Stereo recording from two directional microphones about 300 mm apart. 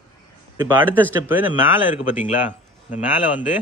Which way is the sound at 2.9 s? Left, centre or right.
Left.